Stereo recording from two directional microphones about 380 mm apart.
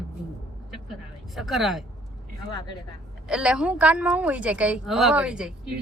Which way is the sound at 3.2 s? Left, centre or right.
Centre.